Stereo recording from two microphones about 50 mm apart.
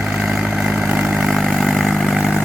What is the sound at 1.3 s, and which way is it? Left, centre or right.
Vehicle, centre.